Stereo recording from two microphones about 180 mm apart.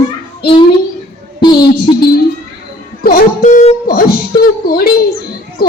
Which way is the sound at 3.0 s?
50° left (ahead or behind).